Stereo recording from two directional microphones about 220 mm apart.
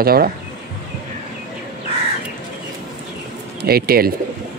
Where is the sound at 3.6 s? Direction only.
45° right (ahead or behind).